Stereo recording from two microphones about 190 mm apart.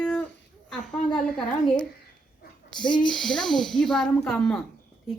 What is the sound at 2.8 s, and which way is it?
Speech, 25° left (ahead or behind).